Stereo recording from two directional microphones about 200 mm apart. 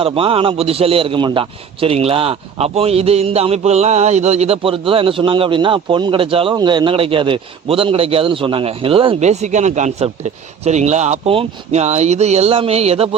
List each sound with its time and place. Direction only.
0.0 s a man's voice: 25° right (ahead or behind)